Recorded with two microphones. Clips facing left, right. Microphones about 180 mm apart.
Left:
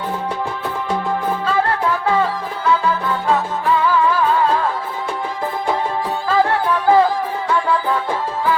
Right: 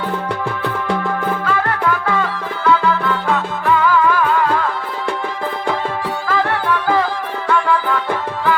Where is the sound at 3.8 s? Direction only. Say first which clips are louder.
Right 2 dB; 30° left (ahead or behind).